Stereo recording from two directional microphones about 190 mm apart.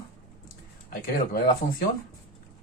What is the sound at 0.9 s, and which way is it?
Speech, 50° left (ahead or behind).